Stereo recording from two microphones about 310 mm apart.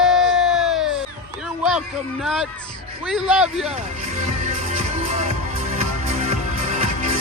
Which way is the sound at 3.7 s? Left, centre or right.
Right.